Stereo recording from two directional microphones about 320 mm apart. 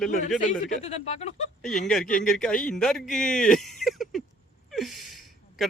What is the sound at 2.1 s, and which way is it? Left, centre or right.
Speech, centre.